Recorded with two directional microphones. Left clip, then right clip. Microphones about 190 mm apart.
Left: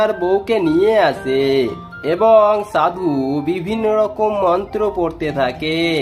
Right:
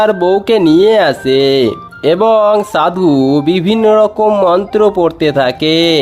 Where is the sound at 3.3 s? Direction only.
45° right (ahead or behind).